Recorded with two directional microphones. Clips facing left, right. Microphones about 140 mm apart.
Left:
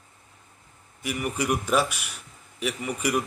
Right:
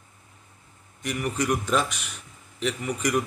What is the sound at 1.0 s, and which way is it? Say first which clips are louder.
Speech: right 1 dB; 10° left (ahead or behind).